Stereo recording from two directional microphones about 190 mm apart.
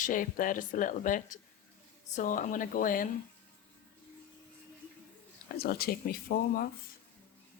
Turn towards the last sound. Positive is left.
turn(degrees=50)  # may be behind; listen again after turning